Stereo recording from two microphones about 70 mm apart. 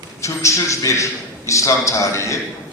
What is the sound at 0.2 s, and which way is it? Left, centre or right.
A man's voice, left.